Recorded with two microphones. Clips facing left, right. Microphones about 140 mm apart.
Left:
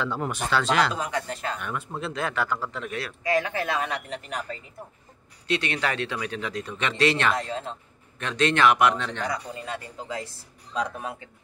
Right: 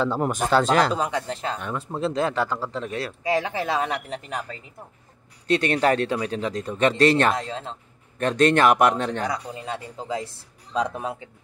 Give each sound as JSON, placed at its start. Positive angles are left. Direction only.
{"t": 0.0, "sound": "speech", "side_deg": -40}
{"t": 0.9, "sound": "speech", "side_deg": -25}
{"t": 5.5, "sound": "speech", "side_deg": -45}
{"t": 9.3, "sound": "speech", "side_deg": -25}